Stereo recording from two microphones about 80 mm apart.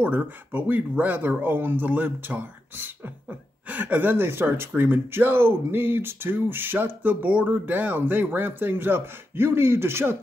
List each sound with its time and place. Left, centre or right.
0.0 s speech: right